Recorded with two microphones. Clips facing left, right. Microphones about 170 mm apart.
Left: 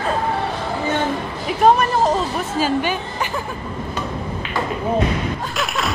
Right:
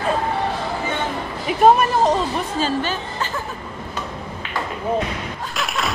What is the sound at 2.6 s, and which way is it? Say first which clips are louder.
Speech: left 5 dB; 15° left (ahead or behind).